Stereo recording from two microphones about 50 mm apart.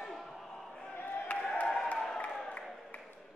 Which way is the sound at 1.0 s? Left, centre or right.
Left.